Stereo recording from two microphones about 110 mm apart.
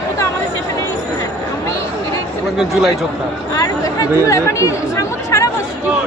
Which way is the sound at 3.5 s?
30° left (ahead or behind).